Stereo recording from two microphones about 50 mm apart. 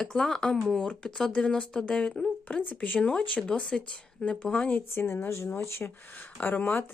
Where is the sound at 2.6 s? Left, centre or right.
Left.